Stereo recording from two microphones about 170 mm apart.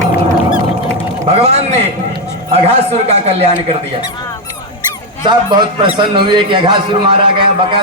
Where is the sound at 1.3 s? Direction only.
40° right (ahead or behind).